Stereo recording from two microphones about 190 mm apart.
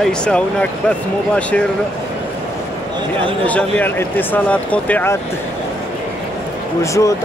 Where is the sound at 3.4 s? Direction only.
10° left (ahead or behind).